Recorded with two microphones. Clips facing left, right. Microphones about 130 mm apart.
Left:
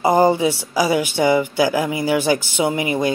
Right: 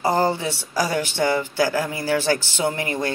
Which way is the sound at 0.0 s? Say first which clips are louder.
Left 6 dB; 15° left (ahead or behind).